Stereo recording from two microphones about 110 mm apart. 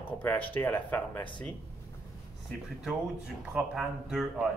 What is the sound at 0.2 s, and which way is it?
Speech, 15° left (ahead or behind).